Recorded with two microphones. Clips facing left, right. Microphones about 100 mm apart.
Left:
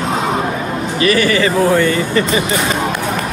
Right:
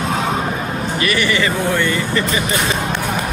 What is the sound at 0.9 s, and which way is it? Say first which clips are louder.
Speech: left 5 dB; 35° left (ahead or behind).